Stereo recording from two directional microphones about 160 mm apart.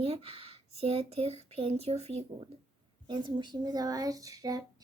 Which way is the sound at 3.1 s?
30° right (ahead or behind).